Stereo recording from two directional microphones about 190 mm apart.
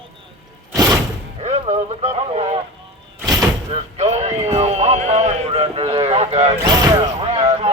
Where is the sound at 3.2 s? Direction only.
20° right (ahead or behind).